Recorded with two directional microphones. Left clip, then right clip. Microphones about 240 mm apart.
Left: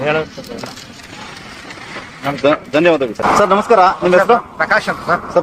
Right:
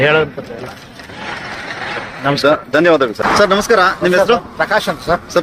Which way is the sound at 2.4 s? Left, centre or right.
Centre.